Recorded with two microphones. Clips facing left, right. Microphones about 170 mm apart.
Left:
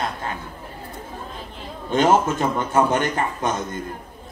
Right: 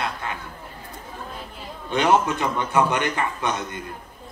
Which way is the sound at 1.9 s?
45° left (ahead or behind).